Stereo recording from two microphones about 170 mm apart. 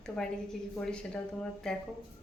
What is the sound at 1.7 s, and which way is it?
Speech, 5° left (ahead or behind).